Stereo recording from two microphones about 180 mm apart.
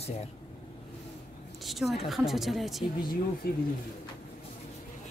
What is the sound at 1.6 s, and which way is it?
A woman's voice, centre (ahead or behind).